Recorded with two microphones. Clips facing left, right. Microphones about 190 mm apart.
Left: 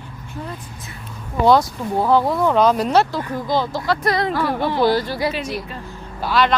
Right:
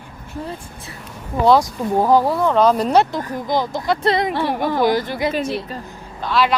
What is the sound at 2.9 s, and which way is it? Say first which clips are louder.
Speech: right 1 dB; 20° right (ahead or behind).